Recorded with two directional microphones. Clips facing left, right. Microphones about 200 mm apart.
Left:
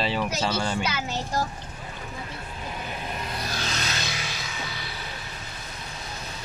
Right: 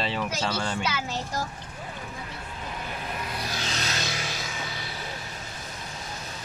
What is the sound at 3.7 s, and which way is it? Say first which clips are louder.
Music: even; 35° right (ahead or behind).